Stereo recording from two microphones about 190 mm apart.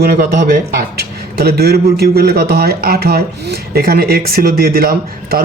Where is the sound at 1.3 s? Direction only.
55° right (ahead or behind).